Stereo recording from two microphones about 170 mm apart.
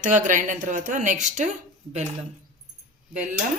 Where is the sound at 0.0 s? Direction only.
50° right (ahead or behind).